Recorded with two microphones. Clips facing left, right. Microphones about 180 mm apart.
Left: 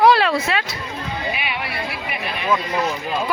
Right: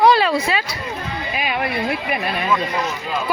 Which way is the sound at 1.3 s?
45° right (ahead or behind).